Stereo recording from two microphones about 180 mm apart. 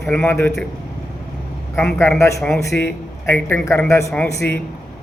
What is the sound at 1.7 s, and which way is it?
A man's voice, 10° left (ahead or behind).